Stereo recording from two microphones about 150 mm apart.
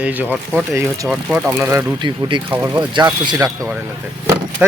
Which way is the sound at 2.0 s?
30° right (ahead or behind).